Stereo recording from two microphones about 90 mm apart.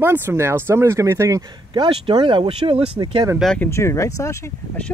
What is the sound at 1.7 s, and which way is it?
Speech, 60° right (ahead or behind).